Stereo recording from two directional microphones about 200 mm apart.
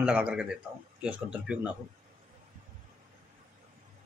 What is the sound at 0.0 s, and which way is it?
Speech, 5° right (ahead or behind).